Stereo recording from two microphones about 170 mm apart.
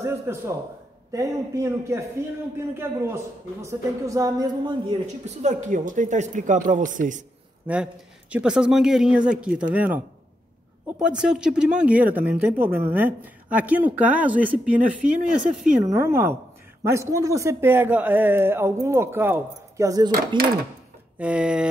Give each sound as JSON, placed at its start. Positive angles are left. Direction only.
{"t": 0.0, "sound": "a woman's voice", "side_deg": -15}
{"t": 5.2, "sound": "speech", "side_deg": -40}
{"t": 7.6, "sound": "speech", "side_deg": -5}
{"t": 15.8, "sound": "a woman's voice", "side_deg": -15}
{"t": 20.1, "sound": "speech", "side_deg": -60}
{"t": 21.2, "sound": "speech", "side_deg": -5}